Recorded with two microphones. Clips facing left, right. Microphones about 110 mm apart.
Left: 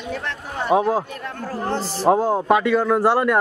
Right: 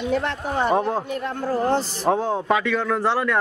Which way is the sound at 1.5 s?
15° right (ahead or behind).